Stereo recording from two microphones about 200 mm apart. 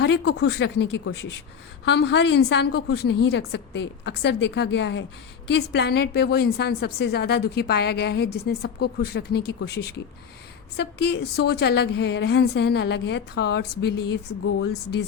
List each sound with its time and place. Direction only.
0.0 s a woman's voice: 55° left (ahead or behind)
10.8 s a woman's voice: 55° left (ahead or behind); by 14.7 s 80° left